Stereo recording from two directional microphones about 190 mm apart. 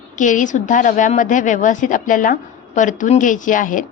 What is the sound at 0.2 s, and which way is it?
A woman's voice, 40° left (ahead or behind).